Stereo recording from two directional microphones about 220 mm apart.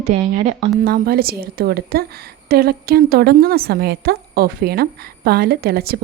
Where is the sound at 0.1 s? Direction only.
30° right (ahead or behind).